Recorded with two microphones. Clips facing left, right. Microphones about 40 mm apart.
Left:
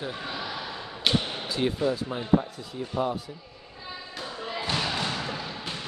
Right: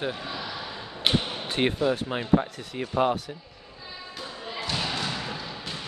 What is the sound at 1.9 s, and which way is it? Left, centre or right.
Speech, right.